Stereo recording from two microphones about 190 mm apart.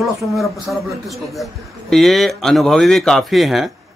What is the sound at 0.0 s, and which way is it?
A man's voice, centre (ahead or behind).